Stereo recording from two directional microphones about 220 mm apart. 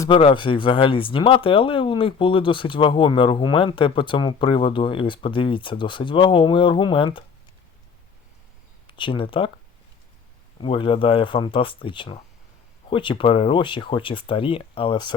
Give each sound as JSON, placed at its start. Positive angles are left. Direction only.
{"t": 0.0, "sound": "speech", "side_deg": 25}
{"t": 8.9, "sound": "speech", "side_deg": 25}
{"t": 10.6, "sound": "speech", "side_deg": 25}